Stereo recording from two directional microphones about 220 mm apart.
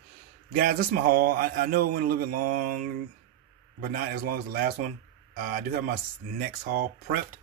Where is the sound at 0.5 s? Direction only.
40° right (ahead or behind).